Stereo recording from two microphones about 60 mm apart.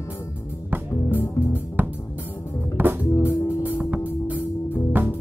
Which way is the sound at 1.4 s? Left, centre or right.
Left.